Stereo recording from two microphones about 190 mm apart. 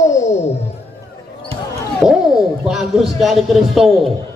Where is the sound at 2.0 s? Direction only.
5° right (ahead or behind).